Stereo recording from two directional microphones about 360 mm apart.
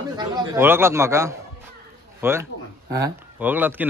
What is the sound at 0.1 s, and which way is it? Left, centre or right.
A man's voice, centre.